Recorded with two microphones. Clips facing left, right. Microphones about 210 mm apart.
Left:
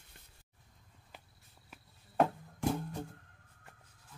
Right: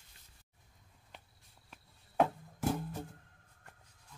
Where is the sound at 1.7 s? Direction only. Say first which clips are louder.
Even; centre (ahead or behind).